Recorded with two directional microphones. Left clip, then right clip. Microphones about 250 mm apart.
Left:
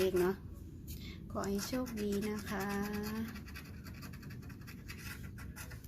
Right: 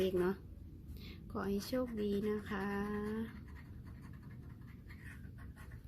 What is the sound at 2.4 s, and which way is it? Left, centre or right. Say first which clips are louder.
Speech: left 2 dB; right.